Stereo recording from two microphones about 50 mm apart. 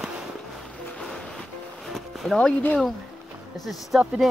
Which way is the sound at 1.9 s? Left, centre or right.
Centre.